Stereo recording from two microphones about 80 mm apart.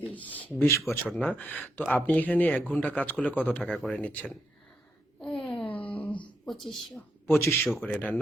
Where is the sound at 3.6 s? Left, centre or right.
Centre.